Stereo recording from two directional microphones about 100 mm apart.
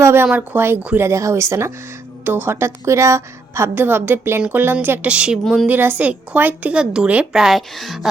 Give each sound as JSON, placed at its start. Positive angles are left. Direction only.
{"t": 0.0, "sound": "a woman's voice", "side_deg": -25}